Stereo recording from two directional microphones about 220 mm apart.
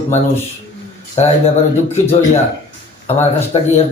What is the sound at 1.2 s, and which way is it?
Speech, 30° left (ahead or behind).